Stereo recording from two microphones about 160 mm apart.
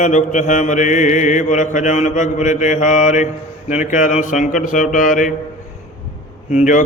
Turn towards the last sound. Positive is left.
turn(degrees=50)  # may be behind; listen again after turning